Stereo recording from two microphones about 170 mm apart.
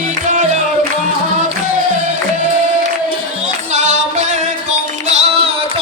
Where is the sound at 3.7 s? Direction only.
45° right (ahead or behind).